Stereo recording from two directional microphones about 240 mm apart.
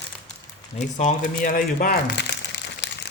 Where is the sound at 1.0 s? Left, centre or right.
Left.